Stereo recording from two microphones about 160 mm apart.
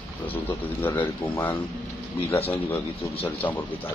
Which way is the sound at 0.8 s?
10° left (ahead or behind).